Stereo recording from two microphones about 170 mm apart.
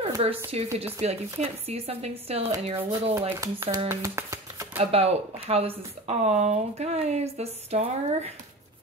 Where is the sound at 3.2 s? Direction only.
15° right (ahead or behind).